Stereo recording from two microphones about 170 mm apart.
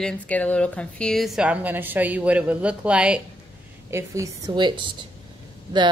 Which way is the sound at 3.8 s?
15° right (ahead or behind).